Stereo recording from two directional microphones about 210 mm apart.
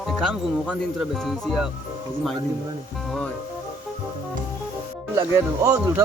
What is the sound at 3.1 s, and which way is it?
Music, 5° left (ahead or behind).